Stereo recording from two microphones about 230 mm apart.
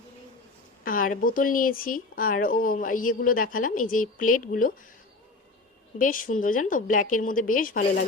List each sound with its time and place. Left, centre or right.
0.9 s speech: left
6.0 s speech: left